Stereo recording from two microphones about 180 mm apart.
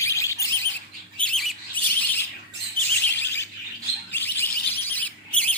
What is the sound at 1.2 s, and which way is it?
Bird, centre (ahead or behind).